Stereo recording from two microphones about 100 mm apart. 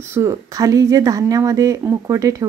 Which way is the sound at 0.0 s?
30° right (ahead or behind).